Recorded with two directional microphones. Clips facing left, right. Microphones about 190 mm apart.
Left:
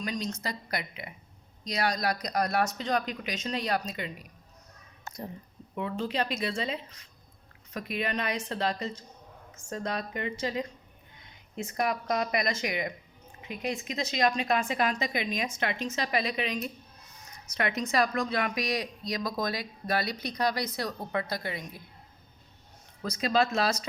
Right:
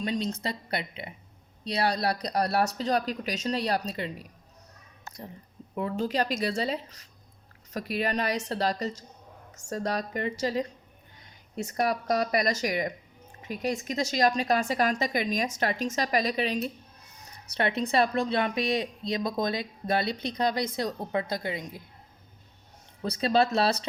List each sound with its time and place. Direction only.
0.0 s a woman's voice: 30° right (ahead or behind)
5.7 s a woman's voice: 40° right (ahead or behind); by 21.8 s 20° right (ahead or behind)
23.0 s a woman's voice: 35° right (ahead or behind)